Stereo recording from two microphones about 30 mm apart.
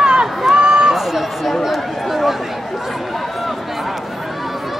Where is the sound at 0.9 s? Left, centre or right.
Centre.